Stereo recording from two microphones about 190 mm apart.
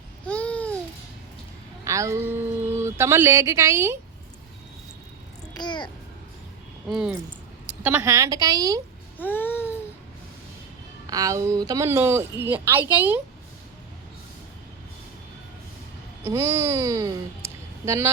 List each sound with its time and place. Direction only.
0.3 s babbling: 5° left (ahead or behind)
1.8 s speech: 15° right (ahead or behind)
5.5 s a child's voice: 25° left (ahead or behind)
6.9 s speech: 5° right (ahead or behind); by 8.8 s 20° right (ahead or behind)
9.1 s babbling: 10° left (ahead or behind)
11.0 s speech: 20° right (ahead or behind)
16.2 s speech: 15° right (ahead or behind)